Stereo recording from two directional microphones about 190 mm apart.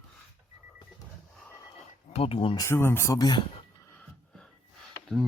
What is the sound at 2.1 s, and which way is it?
Speech, 30° left (ahead or behind).